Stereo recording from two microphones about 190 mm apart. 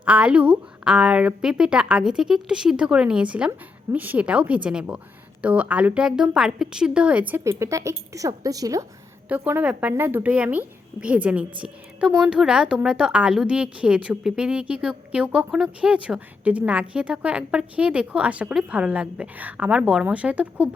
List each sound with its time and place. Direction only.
0.0 s a woman's voice: 5° right (ahead or behind)